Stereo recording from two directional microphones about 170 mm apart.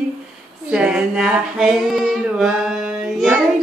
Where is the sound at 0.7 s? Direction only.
5° right (ahead or behind).